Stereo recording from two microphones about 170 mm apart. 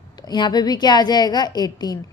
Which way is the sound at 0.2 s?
25° left (ahead or behind).